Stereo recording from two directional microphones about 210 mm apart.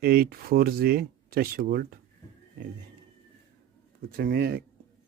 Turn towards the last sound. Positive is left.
turn(degrees=-50)  # may be behind; listen again after turning